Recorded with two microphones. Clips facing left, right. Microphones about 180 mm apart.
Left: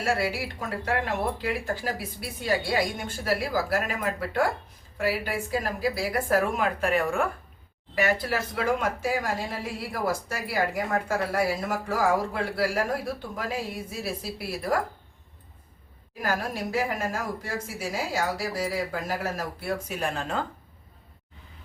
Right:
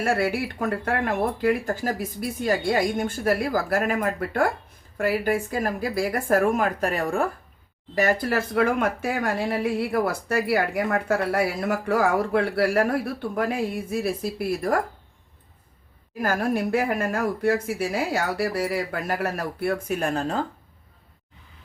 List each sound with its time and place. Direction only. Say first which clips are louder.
0.0 s speech: right 4 dB; 55° right (ahead or behind)
16.2 s speech: right 6 dB; 50° right (ahead or behind)